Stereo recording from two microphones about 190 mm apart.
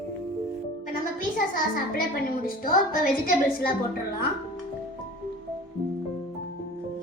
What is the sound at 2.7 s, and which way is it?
A woman's voice, 50° left (ahead or behind).